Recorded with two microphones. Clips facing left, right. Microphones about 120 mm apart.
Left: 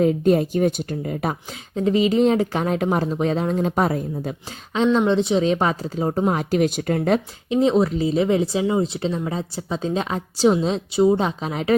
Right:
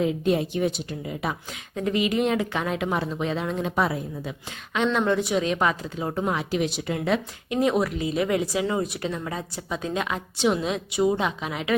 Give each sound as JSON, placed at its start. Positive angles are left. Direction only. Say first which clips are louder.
{"t": 0.0, "sound": "a woman's voice", "louder": "left 6 dB", "side_deg": 45}
{"t": 1.7, "sound": "a woman's voice", "louder": "left 6 dB", "side_deg": 30}
{"t": 4.9, "sound": "a woman's voice", "louder": "left 5 dB", "side_deg": 25}
{"t": 7.5, "sound": "a woman's voice", "louder": "left 5 dB", "side_deg": 25}